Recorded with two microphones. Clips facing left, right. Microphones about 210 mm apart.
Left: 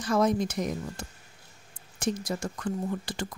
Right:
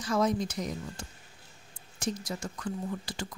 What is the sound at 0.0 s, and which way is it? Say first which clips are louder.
Speech: left 3 dB; 55° left (ahead or behind).